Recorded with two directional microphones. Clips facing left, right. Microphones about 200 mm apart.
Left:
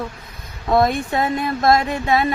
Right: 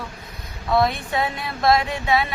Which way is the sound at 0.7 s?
50° left (ahead or behind).